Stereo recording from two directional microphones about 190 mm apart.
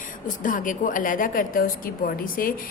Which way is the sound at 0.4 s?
45° left (ahead or behind).